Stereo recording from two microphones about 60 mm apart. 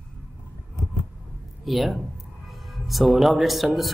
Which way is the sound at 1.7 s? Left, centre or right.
Centre.